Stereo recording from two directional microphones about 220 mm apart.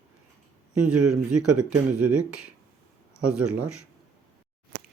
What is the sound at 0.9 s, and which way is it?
Speech, 90° right.